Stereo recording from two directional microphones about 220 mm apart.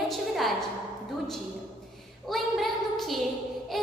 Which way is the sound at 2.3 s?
Centre (ahead or behind).